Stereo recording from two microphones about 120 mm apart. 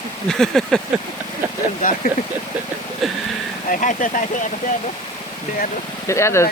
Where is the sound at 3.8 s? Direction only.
90° left.